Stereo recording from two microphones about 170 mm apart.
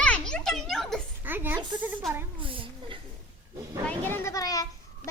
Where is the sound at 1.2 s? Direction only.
10° right (ahead or behind).